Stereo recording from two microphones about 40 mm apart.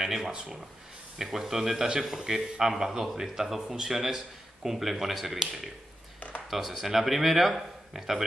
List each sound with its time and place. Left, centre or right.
0.0 s speech: centre
6.1 s a sound: left
6.5 s speech: centre